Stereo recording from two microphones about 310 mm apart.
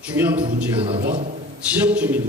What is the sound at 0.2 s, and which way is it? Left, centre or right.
Speech, centre.